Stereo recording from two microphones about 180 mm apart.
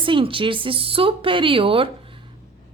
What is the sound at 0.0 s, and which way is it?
A woman's voice, 30° right (ahead or behind).